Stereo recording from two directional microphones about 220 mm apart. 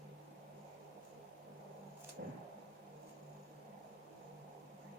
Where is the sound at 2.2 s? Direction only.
45° right (ahead or behind).